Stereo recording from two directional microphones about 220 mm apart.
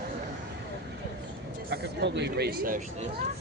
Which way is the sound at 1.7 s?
50° right (ahead or behind).